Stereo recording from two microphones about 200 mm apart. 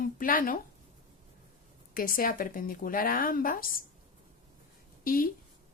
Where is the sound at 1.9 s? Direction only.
45° left (ahead or behind).